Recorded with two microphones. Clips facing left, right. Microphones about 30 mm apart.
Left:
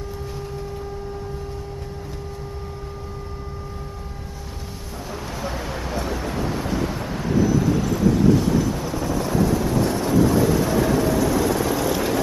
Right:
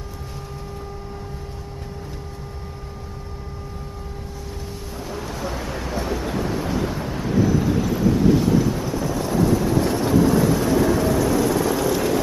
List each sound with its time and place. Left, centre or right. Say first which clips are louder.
5.1 s vehicle: even; centre
7.4 s vehicle: left 1 dB; centre
7.7 s vehicle: even; centre